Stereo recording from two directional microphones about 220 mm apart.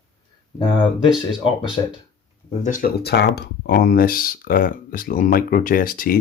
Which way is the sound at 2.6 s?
40° left (ahead or behind).